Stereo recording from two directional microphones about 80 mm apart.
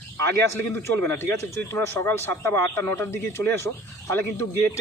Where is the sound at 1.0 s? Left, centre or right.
Left.